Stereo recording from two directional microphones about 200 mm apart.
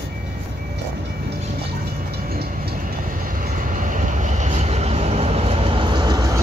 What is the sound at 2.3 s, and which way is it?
Train, 50° right (ahead or behind).